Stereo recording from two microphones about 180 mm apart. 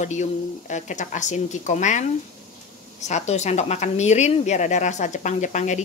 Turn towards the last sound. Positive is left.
turn(degrees=40)  # may be behind; listen again after turning